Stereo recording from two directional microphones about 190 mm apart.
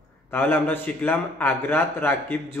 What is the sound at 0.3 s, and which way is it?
A man's voice, 10° left (ahead or behind).